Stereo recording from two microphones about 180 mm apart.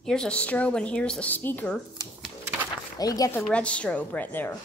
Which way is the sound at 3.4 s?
5° left (ahead or behind).